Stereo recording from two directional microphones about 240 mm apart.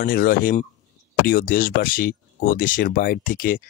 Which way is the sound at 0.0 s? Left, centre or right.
Left.